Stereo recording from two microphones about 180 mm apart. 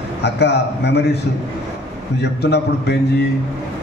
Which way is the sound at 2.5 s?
65° left (ahead or behind).